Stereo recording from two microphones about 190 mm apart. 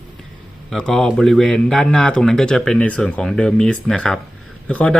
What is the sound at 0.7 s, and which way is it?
Speech, 5° left (ahead or behind).